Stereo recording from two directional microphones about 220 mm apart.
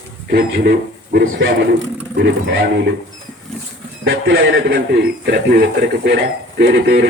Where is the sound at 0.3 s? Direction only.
45° right (ahead or behind).